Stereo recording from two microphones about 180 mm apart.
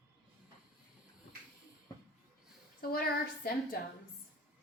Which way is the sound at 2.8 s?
55° left (ahead or behind).